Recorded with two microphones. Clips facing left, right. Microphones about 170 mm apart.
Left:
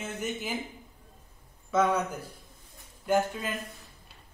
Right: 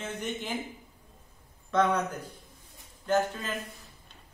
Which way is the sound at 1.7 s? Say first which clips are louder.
Even; 5° left (ahead or behind).